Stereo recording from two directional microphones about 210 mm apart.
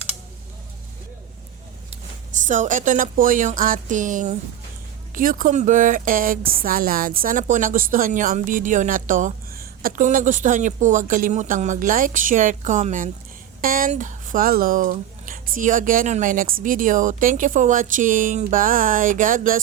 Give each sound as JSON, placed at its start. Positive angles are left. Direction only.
{"t": 2.4, "sound": "speech", "side_deg": -35}